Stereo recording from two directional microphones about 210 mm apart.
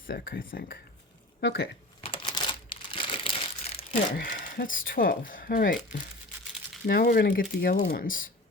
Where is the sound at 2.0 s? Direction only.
25° left (ahead or behind).